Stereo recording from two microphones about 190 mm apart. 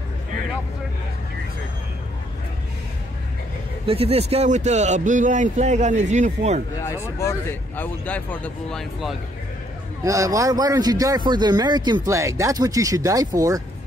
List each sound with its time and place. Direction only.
3.8 s speech: 30° right (ahead or behind)
6.8 s speech: 15° left (ahead or behind)
10.0 s speech: 15° right (ahead or behind)